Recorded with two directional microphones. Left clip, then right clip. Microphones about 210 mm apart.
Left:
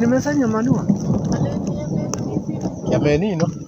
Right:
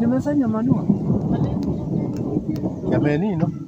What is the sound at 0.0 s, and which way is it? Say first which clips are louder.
Speech: left 3 dB; 40° left (ahead or behind).